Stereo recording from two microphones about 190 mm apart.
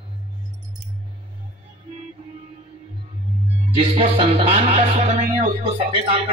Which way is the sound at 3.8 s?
35° right (ahead or behind).